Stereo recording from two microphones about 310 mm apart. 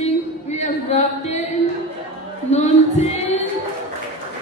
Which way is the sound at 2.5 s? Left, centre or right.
Left.